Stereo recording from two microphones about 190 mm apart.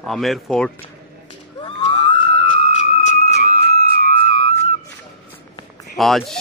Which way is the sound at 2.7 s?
40° left (ahead or behind).